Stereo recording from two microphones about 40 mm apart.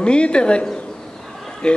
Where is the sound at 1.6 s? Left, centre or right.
Left.